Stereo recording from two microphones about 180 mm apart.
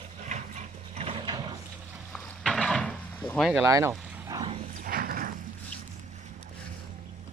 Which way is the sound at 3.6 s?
15° right (ahead or behind).